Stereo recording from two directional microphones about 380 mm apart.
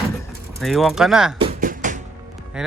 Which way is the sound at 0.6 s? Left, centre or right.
Centre.